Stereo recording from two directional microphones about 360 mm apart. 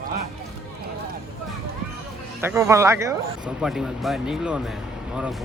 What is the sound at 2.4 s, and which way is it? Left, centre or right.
Speech, centre.